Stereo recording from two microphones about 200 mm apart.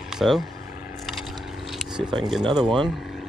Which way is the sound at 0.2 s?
5° right (ahead or behind).